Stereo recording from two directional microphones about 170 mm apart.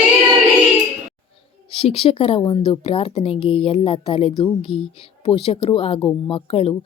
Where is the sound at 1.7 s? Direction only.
35° left (ahead or behind).